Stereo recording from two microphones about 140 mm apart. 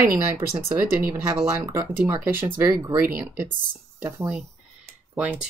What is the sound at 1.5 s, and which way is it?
Speech, 20° right (ahead or behind).